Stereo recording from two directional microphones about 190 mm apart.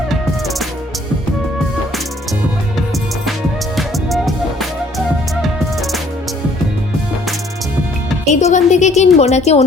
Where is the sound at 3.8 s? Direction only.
Centre (ahead or behind).